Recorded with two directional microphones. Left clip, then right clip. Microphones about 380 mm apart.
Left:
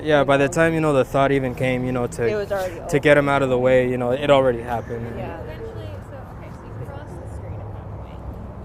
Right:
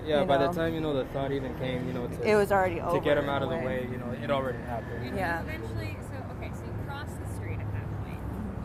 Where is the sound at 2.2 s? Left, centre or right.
Right.